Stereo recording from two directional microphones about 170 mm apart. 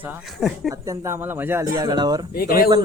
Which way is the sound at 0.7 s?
20° right (ahead or behind).